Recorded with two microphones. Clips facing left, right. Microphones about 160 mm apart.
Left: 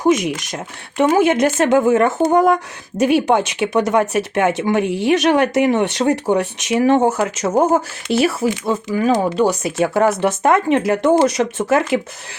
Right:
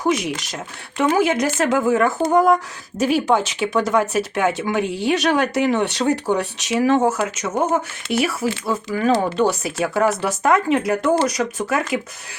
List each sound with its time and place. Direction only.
0.0 s speech: 20° left (ahead or behind)
9.8 s speech: 25° left (ahead or behind)